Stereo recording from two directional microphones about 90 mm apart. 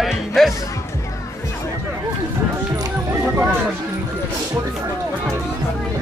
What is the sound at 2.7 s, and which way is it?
Music, 45° right (ahead or behind).